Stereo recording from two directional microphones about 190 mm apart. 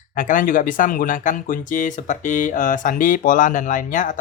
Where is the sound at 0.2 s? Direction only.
45° left (ahead or behind).